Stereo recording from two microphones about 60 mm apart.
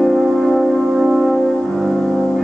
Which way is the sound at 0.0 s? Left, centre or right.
Centre.